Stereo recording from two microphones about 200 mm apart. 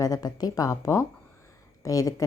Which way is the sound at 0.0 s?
20° left (ahead or behind).